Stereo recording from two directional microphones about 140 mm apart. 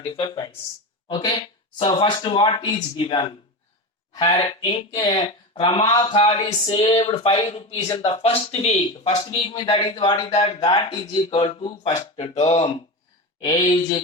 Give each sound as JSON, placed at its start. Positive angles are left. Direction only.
{"t": 0.0, "sound": "speech", "side_deg": 35}
{"t": 11.4, "sound": "speech", "side_deg": 45}